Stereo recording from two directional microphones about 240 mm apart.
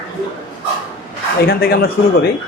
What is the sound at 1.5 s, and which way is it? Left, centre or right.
Speech, left.